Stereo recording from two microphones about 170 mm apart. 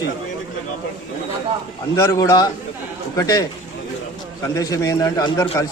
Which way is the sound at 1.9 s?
15° left (ahead or behind).